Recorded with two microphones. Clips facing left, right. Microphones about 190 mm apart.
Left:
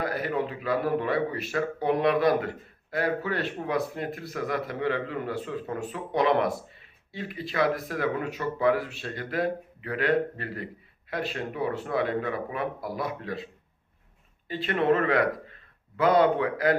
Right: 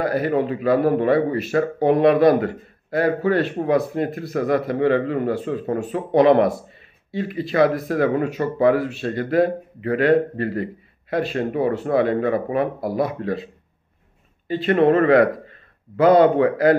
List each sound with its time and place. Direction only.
0.0 s a man's voice: 60° right (ahead or behind)
7.5 s a man's voice: 55° right (ahead or behind)
14.7 s a man's voice: 45° right (ahead or behind)